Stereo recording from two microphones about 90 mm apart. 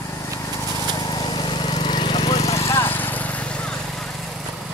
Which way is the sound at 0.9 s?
50° left (ahead or behind).